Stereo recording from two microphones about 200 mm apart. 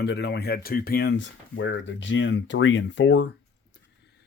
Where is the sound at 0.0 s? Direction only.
55° left (ahead or behind).